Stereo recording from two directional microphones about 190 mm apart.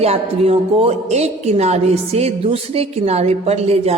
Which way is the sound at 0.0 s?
35° right (ahead or behind).